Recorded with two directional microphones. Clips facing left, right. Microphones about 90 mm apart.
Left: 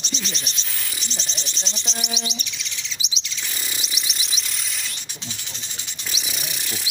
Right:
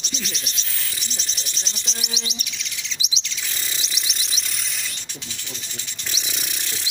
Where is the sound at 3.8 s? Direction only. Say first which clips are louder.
Even; 5° left (ahead or behind).